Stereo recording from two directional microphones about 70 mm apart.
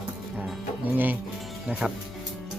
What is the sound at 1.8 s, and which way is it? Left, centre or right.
Speech, centre.